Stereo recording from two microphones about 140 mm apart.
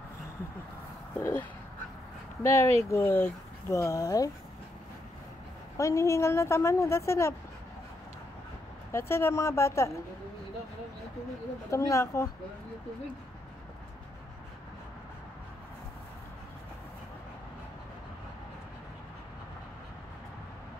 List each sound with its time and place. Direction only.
1.1 s speech: 15° left (ahead or behind)
5.8 s speech: 20° left (ahead or behind)
8.9 s speech: 15° left (ahead or behind)
11.7 s speech: 20° left (ahead or behind)